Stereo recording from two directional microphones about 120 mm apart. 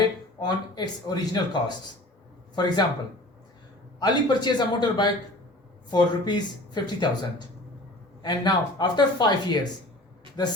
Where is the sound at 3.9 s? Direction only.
35° left (ahead or behind).